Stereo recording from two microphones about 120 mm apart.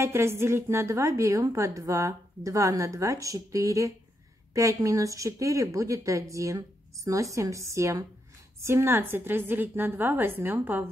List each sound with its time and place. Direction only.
0.0 s a woman's voice: 20° right (ahead or behind)